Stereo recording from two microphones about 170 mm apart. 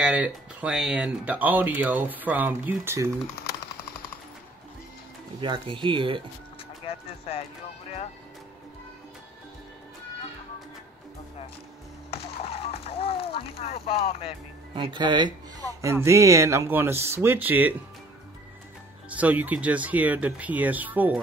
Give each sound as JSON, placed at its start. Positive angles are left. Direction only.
{"t": 0.0, "sound": "speech", "side_deg": -10}
{"t": 5.4, "sound": "speech", "side_deg": -30}
{"t": 6.9, "sound": "speech", "side_deg": 35}
{"t": 12.1, "sound": "a sound", "side_deg": 35}
{"t": 14.7, "sound": "speech", "side_deg": -25}
{"t": 15.8, "sound": "speech", "side_deg": -15}
{"t": 19.0, "sound": "speech", "side_deg": -10}